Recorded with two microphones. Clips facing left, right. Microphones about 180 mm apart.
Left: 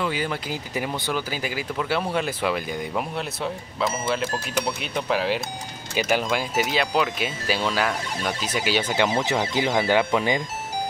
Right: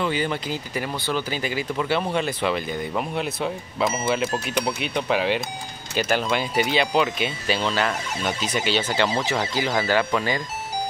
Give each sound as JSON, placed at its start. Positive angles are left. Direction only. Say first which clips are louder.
{"t": 0.0, "sound": "speech", "louder": "right 2 dB", "side_deg": 5}